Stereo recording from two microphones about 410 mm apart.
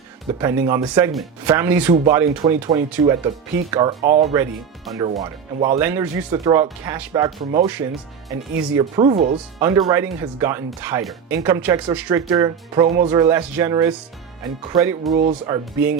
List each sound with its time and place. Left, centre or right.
0.3 s speech: centre
4.9 s speech: centre